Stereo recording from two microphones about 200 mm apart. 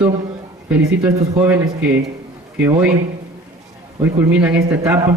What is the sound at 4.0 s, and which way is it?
A man's voice, 10° right (ahead or behind).